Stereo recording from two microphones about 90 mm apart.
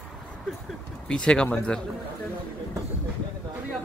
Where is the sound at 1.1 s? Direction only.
10° left (ahead or behind).